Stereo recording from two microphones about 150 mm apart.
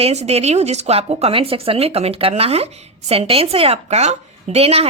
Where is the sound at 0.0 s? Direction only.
45° right (ahead or behind).